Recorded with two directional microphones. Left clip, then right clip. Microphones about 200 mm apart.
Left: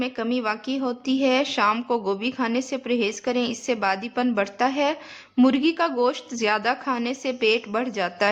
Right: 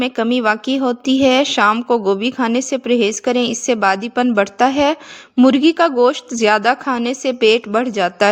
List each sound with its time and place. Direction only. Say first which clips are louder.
0.0 s a woman's voice: right 9 dB; 35° right (ahead or behind)